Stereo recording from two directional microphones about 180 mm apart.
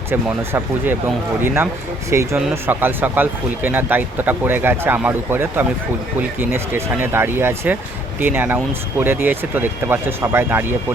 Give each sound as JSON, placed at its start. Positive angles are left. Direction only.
{"t": 0.1, "sound": "speech", "side_deg": -10}
{"t": 2.0, "sound": "speech", "side_deg": -15}